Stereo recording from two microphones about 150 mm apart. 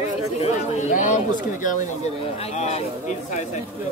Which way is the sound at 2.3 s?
45° left (ahead or behind).